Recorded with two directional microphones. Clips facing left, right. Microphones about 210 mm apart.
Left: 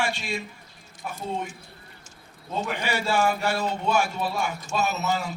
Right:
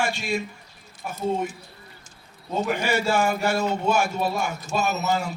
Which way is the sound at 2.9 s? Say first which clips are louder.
Even; 45° right (ahead or behind).